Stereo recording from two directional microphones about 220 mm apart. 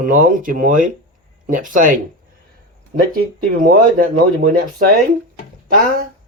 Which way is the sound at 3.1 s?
40° right (ahead or behind).